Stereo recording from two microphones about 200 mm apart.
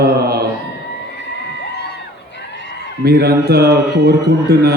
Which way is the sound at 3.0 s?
50° right (ahead or behind).